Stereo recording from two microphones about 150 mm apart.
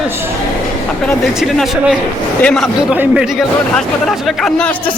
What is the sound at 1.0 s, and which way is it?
A man's voice, centre (ahead or behind).